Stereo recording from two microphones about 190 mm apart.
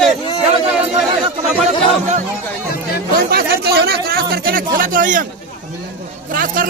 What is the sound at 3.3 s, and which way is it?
Speech, 55° right (ahead or behind).